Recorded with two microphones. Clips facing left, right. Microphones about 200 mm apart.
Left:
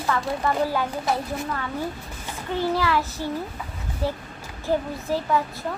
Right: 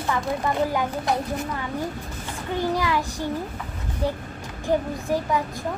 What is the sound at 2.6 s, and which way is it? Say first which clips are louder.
Speech: left 1 dB; 15° right (ahead or behind).